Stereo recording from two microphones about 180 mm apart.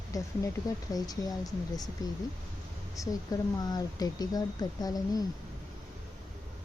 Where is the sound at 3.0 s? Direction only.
20° left (ahead or behind).